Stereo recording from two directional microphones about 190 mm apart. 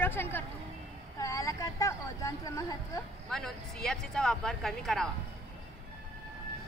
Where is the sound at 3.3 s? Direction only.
Centre (ahead or behind).